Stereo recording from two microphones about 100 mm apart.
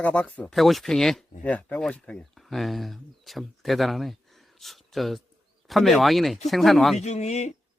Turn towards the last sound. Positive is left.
turn(degrees=90)